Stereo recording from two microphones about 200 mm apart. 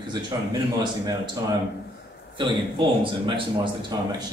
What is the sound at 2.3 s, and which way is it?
A man's voice, 25° right (ahead or behind).